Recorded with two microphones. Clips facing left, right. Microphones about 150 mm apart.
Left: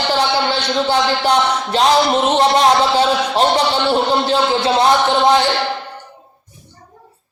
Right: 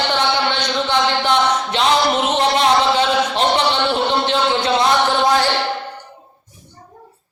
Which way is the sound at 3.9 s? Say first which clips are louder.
Left 3 dB; 35° left (ahead or behind).